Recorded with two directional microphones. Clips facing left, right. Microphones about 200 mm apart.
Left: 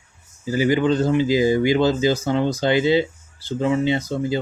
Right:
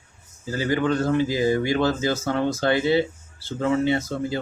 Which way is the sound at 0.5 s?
15° left (ahead or behind).